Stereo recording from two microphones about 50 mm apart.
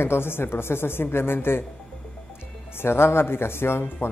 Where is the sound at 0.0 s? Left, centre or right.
Left.